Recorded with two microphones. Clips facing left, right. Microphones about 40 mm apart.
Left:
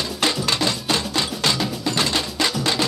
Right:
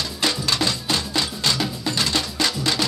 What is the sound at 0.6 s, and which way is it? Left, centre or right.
Music, centre.